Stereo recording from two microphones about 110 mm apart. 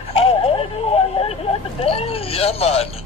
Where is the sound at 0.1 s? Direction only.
60° left (ahead or behind).